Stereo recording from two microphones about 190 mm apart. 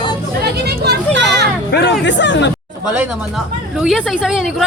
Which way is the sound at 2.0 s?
70° left (ahead or behind).